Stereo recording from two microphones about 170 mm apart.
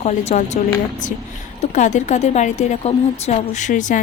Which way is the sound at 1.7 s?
45° left (ahead or behind).